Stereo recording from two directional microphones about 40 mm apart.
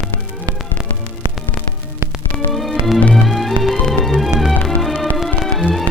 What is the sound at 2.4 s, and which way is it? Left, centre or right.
Music, centre.